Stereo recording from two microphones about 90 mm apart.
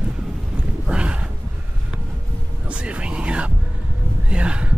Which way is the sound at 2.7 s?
15° right (ahead or behind).